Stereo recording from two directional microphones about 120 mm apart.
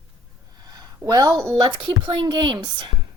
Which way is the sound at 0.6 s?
35° right (ahead or behind).